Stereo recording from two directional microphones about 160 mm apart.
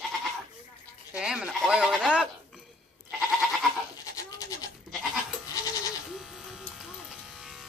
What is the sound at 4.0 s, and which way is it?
Goat, 20° left (ahead or behind).